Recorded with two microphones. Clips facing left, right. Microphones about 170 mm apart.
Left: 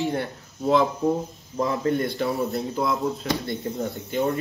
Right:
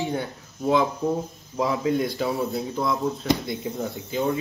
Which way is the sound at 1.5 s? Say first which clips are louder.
Even; 5° right (ahead or behind).